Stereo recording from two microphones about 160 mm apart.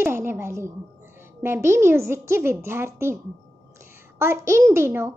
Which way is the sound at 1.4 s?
15° right (ahead or behind).